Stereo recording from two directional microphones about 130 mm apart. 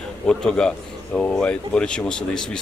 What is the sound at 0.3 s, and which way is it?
A man's voice, 5° left (ahead or behind).